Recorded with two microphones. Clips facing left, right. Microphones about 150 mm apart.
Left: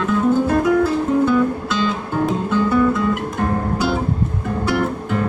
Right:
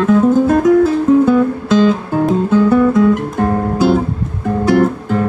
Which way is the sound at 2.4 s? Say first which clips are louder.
Right 5 dB; 45° right (ahead or behind).